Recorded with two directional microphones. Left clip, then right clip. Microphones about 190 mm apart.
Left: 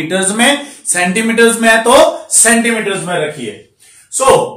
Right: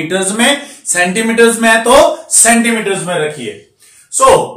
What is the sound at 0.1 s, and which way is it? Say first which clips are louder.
Speech: left 1 dB; 20° left (ahead or behind).